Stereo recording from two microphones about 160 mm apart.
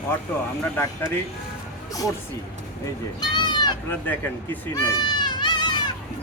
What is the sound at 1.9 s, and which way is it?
Speech, 20° left (ahead or behind).